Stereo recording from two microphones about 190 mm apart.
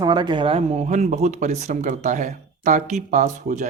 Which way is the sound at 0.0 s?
25° right (ahead or behind).